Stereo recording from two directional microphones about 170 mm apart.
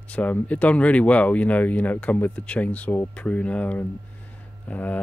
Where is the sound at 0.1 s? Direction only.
10° left (ahead or behind).